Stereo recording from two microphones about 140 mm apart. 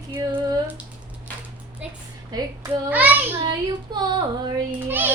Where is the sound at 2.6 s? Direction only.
10° right (ahead or behind).